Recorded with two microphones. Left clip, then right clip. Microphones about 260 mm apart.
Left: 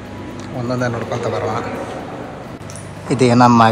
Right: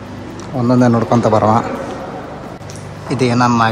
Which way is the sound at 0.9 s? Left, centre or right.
Centre.